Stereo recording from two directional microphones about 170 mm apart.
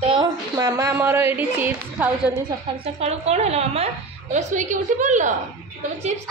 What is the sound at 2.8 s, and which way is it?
A woman's voice, 40° right (ahead or behind).